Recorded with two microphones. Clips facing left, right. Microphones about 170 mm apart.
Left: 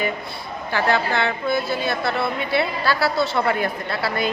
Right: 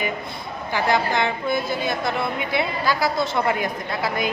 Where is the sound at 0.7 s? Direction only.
15° right (ahead or behind).